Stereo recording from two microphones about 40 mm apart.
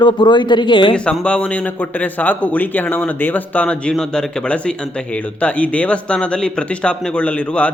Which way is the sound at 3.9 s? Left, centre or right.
Centre.